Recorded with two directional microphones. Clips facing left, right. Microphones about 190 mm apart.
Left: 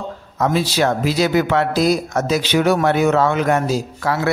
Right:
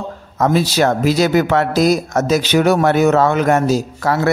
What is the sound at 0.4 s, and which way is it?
A man's voice, 45° right (ahead or behind).